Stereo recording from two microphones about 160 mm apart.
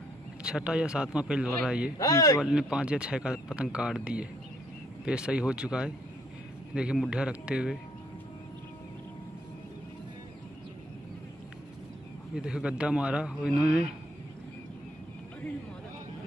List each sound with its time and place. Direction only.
0.4 s speech: 5° right (ahead or behind)
2.0 s a man's voice: 20° left (ahead or behind)
2.4 s speech: 5° right (ahead or behind)
12.4 s a man's voice: 5° right (ahead or behind)
13.4 s speech: 75° left (ahead or behind)